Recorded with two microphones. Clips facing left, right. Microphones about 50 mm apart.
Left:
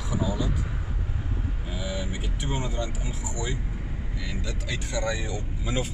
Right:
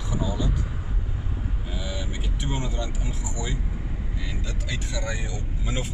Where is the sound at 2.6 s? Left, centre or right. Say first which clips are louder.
Even; left.